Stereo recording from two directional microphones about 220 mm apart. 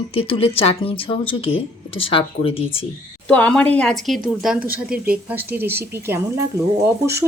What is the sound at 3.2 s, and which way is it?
A woman's voice, 5° left (ahead or behind).